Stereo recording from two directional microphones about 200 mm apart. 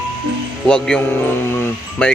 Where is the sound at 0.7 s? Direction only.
5° left (ahead or behind).